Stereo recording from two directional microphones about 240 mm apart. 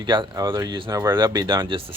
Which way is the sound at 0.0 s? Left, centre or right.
Centre.